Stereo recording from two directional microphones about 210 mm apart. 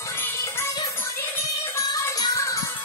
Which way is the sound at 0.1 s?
10° left (ahead or behind).